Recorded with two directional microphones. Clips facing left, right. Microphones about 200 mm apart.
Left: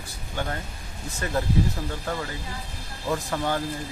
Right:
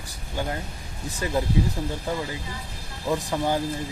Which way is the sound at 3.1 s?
10° right (ahead or behind).